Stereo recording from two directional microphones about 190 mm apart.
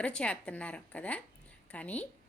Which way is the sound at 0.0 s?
5° left (ahead or behind).